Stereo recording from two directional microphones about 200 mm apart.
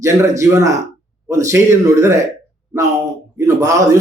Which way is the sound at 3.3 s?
15° right (ahead or behind).